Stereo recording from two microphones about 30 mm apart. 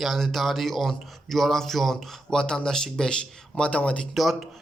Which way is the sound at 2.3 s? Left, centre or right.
Left.